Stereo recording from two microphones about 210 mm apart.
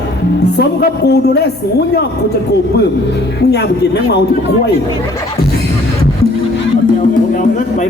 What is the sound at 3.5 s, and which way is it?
Speech, 50° left (ahead or behind).